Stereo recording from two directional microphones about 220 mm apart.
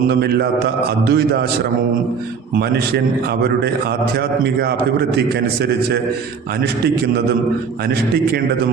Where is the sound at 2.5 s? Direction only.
45° right (ahead or behind).